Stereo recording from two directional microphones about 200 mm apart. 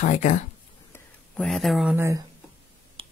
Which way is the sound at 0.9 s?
5° left (ahead or behind).